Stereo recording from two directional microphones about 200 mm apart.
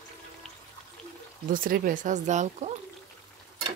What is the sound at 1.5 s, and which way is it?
Speech, 45° right (ahead or behind).